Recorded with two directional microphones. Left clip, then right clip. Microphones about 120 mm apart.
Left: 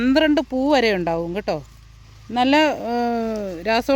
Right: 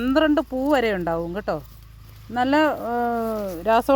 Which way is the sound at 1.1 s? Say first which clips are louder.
Left 2 dB; 25° left (ahead or behind).